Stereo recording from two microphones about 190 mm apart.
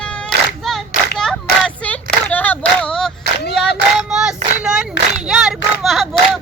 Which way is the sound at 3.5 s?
Centre (ahead or behind).